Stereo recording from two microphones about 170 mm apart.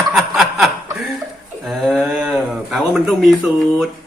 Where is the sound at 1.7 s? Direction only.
Centre (ahead or behind).